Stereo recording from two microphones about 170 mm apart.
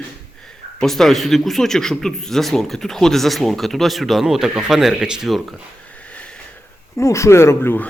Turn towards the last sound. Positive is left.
turn(degrees=15)  # may be behind; listen again after turning